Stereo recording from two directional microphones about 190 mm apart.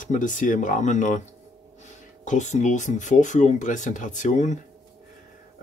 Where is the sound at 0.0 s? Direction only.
45° left (ahead or behind).